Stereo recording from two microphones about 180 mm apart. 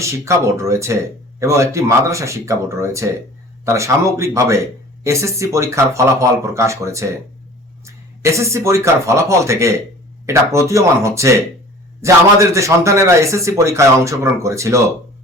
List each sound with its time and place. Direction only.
0.0 s speech: 15° right (ahead or behind)
8.2 s speech: 15° right (ahead or behind)